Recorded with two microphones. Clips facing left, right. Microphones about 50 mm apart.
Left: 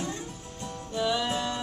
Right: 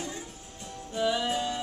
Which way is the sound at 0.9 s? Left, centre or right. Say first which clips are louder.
Even; centre.